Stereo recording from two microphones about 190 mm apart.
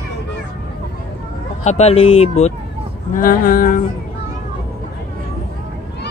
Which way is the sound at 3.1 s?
45° left (ahead or behind).